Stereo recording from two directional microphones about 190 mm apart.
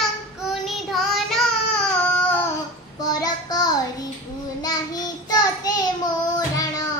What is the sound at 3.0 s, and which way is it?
Child singing, 20° left (ahead or behind).